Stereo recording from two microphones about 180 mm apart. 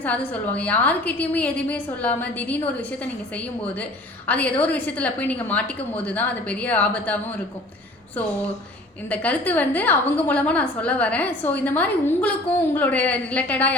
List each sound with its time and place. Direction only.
0.0 s a woman's voice: 10° left (ahead or behind)
9.0 s a woman's voice: 10° left (ahead or behind)